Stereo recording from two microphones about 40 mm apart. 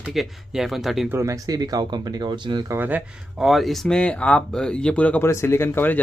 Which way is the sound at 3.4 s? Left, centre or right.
Centre.